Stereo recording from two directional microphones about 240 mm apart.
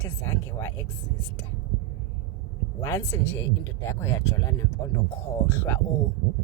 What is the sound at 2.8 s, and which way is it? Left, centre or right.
Speech, centre.